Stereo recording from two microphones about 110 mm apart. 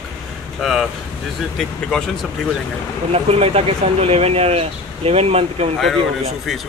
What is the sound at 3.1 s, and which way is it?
Speech, 65° right (ahead or behind).